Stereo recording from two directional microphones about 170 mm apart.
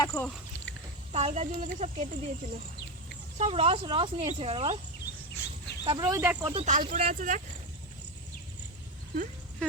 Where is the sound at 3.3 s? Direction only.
35° right (ahead or behind).